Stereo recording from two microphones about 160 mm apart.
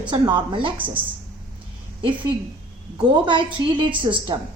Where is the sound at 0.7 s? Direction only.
10° right (ahead or behind).